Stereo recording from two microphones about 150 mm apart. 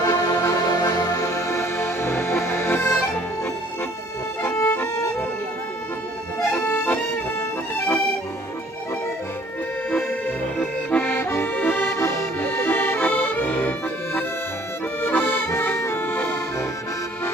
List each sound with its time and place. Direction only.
0.0 s music: 25° left (ahead or behind)
4.4 s accordion: 15° left (ahead or behind)
6.5 s accordion: 15° left (ahead or behind)
10.6 s accordion: 10° left (ahead or behind)